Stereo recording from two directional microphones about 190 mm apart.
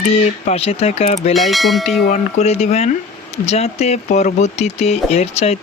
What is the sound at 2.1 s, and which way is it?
Speech, 35° left (ahead or behind).